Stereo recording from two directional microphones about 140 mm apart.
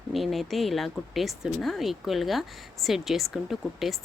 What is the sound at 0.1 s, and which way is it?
Speech, centre (ahead or behind).